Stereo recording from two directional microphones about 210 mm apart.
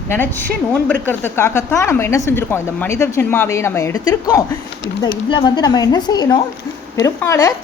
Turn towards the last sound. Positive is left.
turn(degrees=15)  # may be behind; listen again after turning